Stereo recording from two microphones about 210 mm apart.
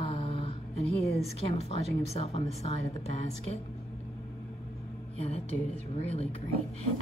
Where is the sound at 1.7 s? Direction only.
30° left (ahead or behind).